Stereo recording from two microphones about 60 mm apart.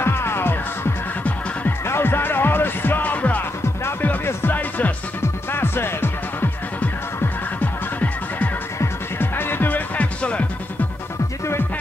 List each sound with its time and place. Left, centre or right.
0.0 s music: left
5.2 s music: left
7.6 s music: left